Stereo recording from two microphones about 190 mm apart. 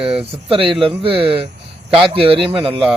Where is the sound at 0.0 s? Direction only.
5° right (ahead or behind).